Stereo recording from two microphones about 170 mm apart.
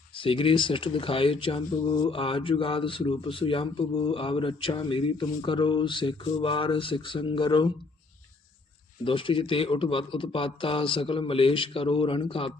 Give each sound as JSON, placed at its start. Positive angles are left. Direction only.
{"t": 0.2, "sound": "speech", "side_deg": 30}
{"t": 9.0, "sound": "speech", "side_deg": 30}